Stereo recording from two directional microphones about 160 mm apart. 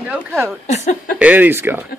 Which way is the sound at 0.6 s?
45° left (ahead or behind).